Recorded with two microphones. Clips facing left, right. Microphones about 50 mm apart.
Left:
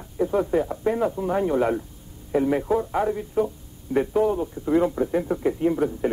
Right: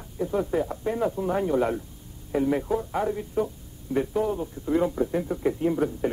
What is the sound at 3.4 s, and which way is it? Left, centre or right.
A man's voice, centre.